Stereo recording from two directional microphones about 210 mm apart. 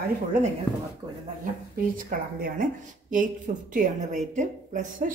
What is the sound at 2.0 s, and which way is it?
A woman's voice, 40° right (ahead or behind).